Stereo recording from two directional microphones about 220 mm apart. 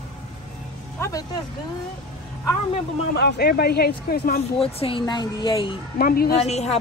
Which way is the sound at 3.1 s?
45° left (ahead or behind).